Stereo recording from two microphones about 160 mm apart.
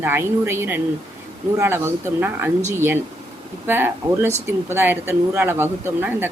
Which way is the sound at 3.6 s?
15° right (ahead or behind).